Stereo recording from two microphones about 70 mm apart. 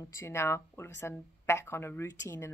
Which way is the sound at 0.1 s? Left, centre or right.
Left.